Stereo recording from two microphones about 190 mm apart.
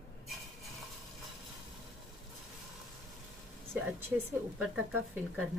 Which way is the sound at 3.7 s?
10° right (ahead or behind).